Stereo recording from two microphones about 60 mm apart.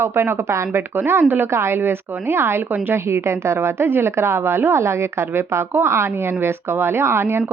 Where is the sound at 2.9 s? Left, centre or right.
Right.